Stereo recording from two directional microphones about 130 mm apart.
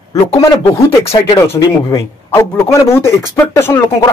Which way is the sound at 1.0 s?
45° left (ahead or behind).